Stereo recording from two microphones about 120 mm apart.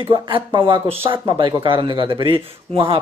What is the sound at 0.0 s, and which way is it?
Speech, 45° right (ahead or behind).